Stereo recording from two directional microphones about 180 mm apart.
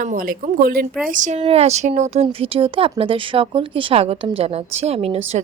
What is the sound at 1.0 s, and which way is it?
Speech, 45° right (ahead or behind).